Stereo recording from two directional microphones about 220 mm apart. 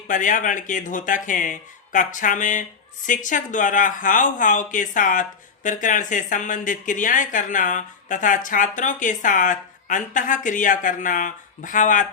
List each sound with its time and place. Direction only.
0.1 s speech: 35° left (ahead or behind)